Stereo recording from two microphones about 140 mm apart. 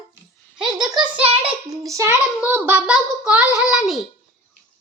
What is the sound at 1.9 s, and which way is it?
A child's voice, 20° right (ahead or behind).